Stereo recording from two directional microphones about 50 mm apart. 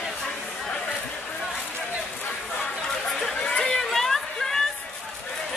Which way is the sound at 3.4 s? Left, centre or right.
Centre.